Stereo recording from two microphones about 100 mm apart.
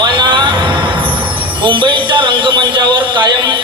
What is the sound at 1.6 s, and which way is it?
A man's voice, 55° right (ahead or behind).